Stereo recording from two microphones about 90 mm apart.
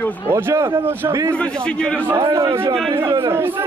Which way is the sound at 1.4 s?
10° left (ahead or behind).